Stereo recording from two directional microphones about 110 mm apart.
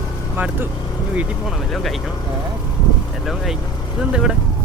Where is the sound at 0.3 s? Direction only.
15° right (ahead or behind).